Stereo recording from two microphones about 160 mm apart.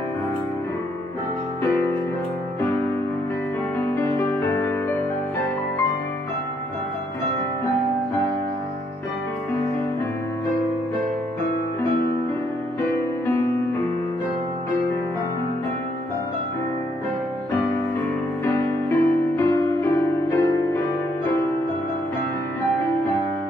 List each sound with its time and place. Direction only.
3.9 s music: 15° left (ahead or behind)
18.4 s music: 15° left (ahead or behind)